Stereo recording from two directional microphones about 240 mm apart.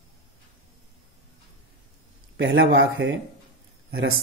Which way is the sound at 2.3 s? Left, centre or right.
Right.